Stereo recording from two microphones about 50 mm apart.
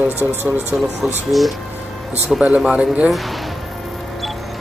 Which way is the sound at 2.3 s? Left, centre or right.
Right.